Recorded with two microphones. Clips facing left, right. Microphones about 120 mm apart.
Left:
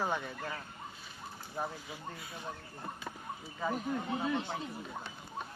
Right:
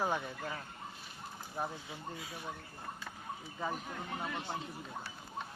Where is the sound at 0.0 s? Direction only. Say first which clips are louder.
Even; 10° right (ahead or behind).